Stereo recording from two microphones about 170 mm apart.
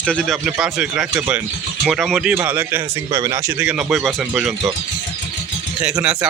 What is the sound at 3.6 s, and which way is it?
Speech, 5° right (ahead or behind).